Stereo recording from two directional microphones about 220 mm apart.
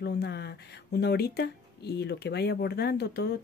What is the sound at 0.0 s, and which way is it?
Speech, 50° left (ahead or behind).